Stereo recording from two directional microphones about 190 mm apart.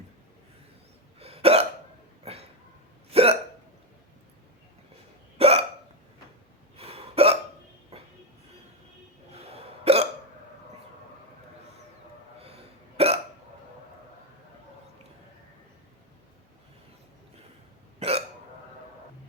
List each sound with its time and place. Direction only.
1.2 s hiccup: 30° right (ahead or behind)
2.2 s a sound: 30° right (ahead or behind)
3.1 s hiccup: 30° right (ahead or behind)
5.4 s hiccup: 30° right (ahead or behind)
6.7 s hiccup: 30° right (ahead or behind)
7.9 s train: 30° right (ahead or behind)
9.3 s hiccup: 30° right (ahead or behind)
12.5 s hiccup: 30° right (ahead or behind)